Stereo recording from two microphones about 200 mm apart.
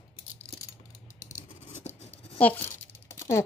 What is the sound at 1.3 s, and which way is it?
Scissors, 35° left (ahead or behind).